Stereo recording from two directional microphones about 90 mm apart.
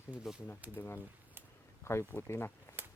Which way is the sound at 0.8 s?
25° left (ahead or behind).